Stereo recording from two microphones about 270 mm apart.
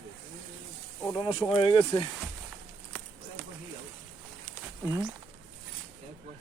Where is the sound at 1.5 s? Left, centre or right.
Centre.